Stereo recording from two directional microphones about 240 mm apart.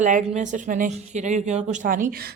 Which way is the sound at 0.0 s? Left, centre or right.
Right.